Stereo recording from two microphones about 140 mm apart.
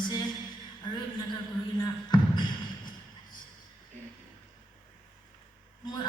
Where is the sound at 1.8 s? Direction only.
30° left (ahead or behind).